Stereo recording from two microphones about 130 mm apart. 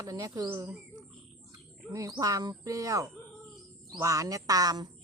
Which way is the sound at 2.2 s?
30° right (ahead or behind).